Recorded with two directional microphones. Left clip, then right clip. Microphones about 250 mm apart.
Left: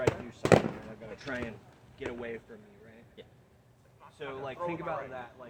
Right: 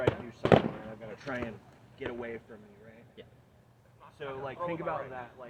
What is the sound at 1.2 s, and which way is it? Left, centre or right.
Speech, right.